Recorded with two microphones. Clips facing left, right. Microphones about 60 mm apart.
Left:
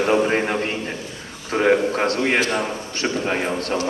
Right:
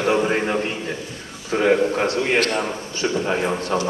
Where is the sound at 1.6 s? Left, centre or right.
Left.